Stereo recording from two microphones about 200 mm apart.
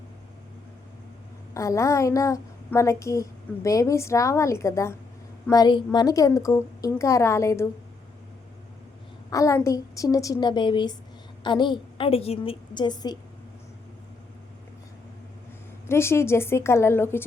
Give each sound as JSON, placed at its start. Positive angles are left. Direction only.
{"t": 1.5, "sound": "a woman's voice", "side_deg": 15}
{"t": 9.3, "sound": "a woman's voice", "side_deg": 15}
{"t": 15.9, "sound": "a woman's voice", "side_deg": 10}